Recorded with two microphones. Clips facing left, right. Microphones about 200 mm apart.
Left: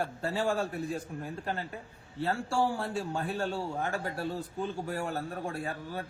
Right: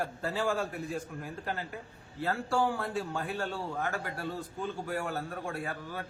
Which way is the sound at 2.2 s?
30° left (ahead or behind).